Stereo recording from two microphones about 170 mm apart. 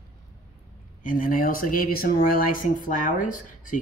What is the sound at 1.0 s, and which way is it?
Speech, 55° left (ahead or behind).